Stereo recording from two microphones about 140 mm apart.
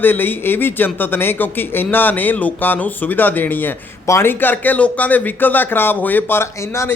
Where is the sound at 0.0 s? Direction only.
15° left (ahead or behind).